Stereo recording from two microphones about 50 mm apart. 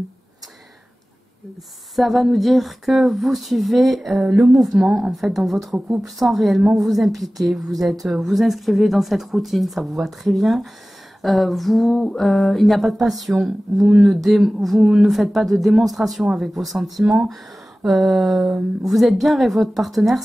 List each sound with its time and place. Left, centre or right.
2.0 s speech: centre
13.7 s speech: centre
14.0 s speech: centre